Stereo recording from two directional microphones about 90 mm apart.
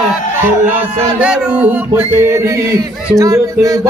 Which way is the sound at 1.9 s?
30° right (ahead or behind).